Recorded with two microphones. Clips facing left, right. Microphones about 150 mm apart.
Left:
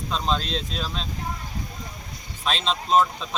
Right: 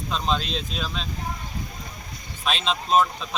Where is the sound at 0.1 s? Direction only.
Centre (ahead or behind).